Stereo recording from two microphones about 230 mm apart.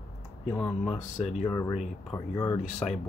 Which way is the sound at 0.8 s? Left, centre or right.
Left.